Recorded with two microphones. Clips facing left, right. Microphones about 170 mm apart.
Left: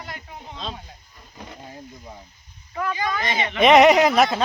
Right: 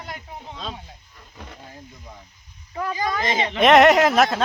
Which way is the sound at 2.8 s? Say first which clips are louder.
Right 1 dB; 35° right (ahead or behind).